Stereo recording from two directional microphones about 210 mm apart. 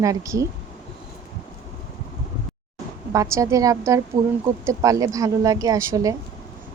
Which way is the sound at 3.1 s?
15° right (ahead or behind).